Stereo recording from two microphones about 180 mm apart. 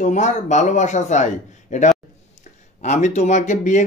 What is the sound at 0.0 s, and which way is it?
Speech, 40° left (ahead or behind).